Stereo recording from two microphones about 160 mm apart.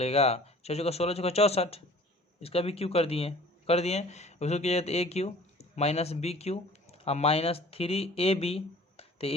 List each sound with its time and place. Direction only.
0.0 s speech: 40° left (ahead or behind)